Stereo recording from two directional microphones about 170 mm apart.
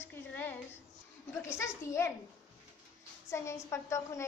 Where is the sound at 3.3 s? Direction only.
15° left (ahead or behind).